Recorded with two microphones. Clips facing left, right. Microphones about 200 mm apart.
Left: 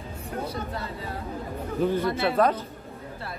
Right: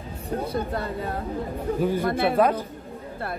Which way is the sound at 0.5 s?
50° right (ahead or behind).